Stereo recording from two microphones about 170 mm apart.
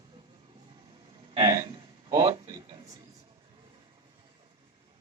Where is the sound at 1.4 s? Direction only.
25° right (ahead or behind).